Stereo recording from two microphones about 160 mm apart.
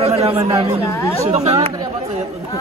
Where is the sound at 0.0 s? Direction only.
40° right (ahead or behind).